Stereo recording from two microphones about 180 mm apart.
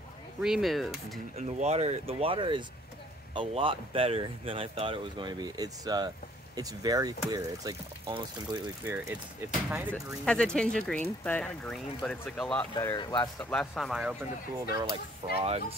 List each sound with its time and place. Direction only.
0.4 s speech: centre (ahead or behind)
1.3 s speech: 40° right (ahead or behind); by 8.5 s 20° right (ahead or behind)
8.8 s speech: 10° right (ahead or behind)
9.9 s speech: 5° left (ahead or behind)
12.7 s speech: 20° left (ahead or behind)
13.4 s speech: 5° left (ahead or behind)
14.7 s speech: 20° right (ahead or behind)
15.3 s speech: 35° right (ahead or behind)